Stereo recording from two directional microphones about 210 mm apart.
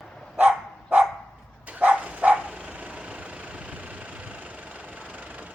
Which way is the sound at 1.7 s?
5° right (ahead or behind).